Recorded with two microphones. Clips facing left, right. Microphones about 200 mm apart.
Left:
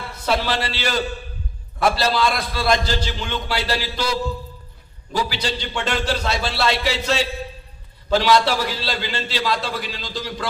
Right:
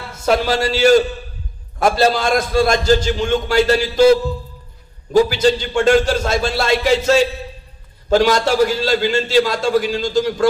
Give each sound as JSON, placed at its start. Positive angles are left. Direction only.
{"t": 0.1, "sound": "a man's voice", "side_deg": -45}